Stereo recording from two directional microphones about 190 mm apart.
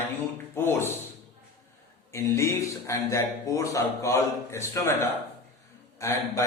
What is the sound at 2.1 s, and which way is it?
A man's voice, 15° left (ahead or behind).